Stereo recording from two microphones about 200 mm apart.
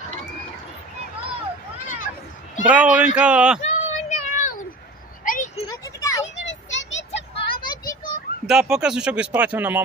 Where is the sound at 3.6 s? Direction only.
40° left (ahead or behind).